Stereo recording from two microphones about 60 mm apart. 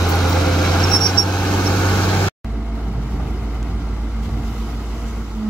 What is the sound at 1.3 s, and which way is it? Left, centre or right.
Vehicle, left.